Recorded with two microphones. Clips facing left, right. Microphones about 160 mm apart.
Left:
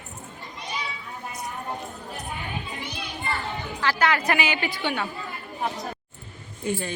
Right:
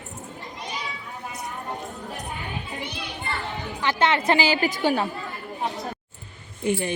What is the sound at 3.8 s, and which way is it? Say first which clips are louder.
A woman's voice: right 1 dB; 20° right (ahead or behind).